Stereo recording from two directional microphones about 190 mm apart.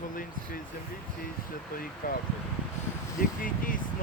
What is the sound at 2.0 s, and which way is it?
Speech, 50° left (ahead or behind).